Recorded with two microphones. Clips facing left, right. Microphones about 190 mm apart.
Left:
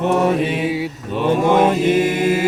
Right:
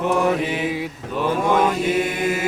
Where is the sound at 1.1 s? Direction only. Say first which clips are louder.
Left 4 dB; 20° left (ahead or behind).